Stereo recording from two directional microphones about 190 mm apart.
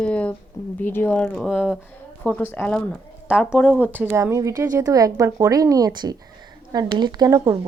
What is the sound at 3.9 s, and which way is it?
Speech, 10° right (ahead or behind).